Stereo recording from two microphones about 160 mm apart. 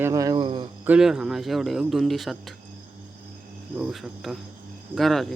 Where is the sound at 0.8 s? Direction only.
5° right (ahead or behind).